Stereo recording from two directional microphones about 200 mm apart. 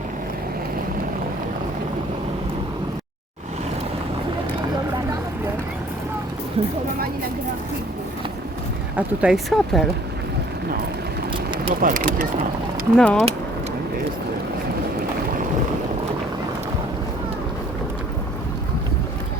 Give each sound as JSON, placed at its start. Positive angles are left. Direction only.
{"t": 6.6, "sound": "speech", "side_deg": -30}
{"t": 9.0, "sound": "speech", "side_deg": -5}
{"t": 11.3, "sound": "vehicle", "side_deg": -25}
{"t": 11.8, "sound": "speech", "side_deg": -45}
{"t": 13.0, "sound": "speech", "side_deg": 5}